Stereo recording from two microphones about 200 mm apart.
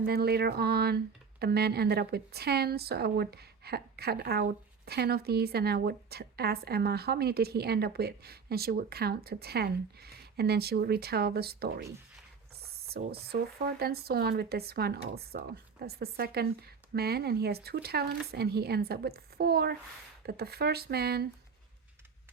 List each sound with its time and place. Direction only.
0.0 s a woman's voice: 50° right (ahead or behind)